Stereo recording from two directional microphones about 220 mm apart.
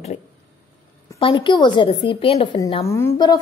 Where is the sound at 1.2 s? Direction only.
20° left (ahead or behind).